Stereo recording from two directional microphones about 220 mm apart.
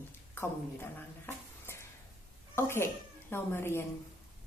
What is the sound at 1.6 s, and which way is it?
Stir, 10° left (ahead or behind).